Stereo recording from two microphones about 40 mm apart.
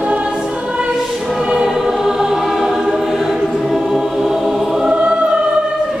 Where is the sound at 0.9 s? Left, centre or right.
Centre.